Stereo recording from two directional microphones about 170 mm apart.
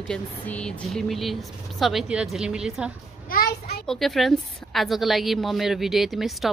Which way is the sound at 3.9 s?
Centre (ahead or behind).